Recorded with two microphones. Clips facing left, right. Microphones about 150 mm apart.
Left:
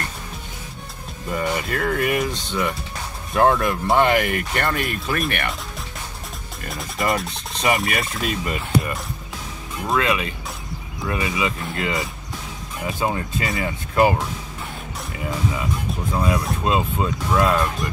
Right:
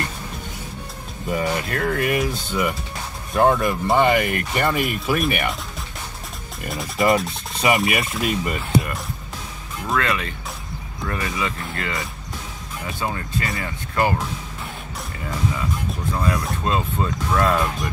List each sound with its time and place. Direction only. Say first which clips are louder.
1.3 s speech: right 1 dB; 5° right (ahead or behind)
6.6 s speech: right 4 dB; centre (ahead or behind)
9.9 s speech: left 2 dB; 10° left (ahead or behind)
16.1 s speech: left 2 dB; 20° left (ahead or behind)